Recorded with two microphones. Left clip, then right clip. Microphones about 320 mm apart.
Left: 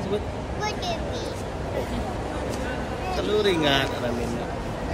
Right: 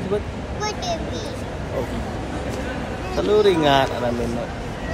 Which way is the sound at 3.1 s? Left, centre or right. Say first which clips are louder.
Right 6 dB; centre.